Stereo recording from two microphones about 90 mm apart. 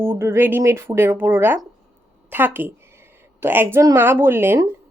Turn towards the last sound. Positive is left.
turn(degrees=-25)  # may be behind; listen again after turning